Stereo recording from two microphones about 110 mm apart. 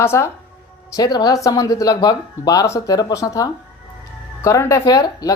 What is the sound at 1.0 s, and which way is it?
Speech, 40° left (ahead or behind).